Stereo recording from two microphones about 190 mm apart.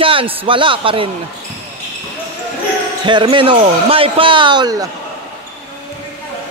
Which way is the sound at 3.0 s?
25° right (ahead or behind).